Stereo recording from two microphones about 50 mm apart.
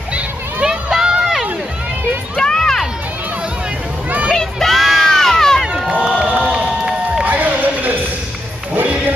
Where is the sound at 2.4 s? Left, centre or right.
Centre.